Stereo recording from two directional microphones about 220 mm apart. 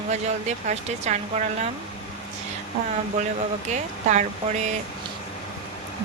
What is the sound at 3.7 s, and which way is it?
Speech, 30° right (ahead or behind).